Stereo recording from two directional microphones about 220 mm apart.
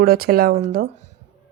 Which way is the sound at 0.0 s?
45° right (ahead or behind).